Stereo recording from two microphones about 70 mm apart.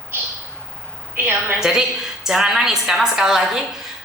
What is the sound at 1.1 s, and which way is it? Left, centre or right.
Speech, right.